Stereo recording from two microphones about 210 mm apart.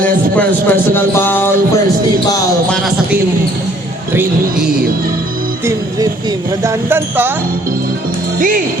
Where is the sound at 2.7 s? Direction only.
Centre (ahead or behind).